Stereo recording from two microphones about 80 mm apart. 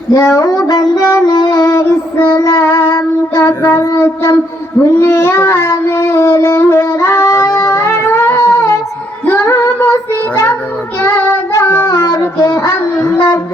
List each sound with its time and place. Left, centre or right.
0.1 s music: left
1.7 s child singing: left
3.9 s a sound: left
4.8 s speech: left
6.4 s child singing: left
8.4 s music: left
9.4 s child singing: left
11.5 s child singing: left
13.1 s a sound: left